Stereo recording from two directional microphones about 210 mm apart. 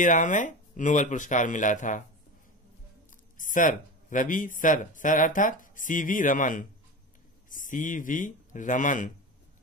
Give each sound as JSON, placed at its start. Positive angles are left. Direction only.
{"t": 0.0, "sound": "speech", "side_deg": 35}
{"t": 3.3, "sound": "speech", "side_deg": 40}